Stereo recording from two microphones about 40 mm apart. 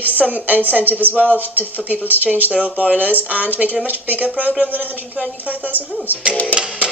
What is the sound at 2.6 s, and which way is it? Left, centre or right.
Speech, right.